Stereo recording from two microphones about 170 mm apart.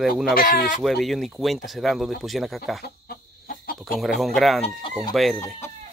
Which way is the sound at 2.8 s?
60° left (ahead or behind).